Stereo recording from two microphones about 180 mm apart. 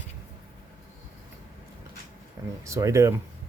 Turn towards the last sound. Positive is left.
turn(degrees=-15)  # may be behind; listen again after turning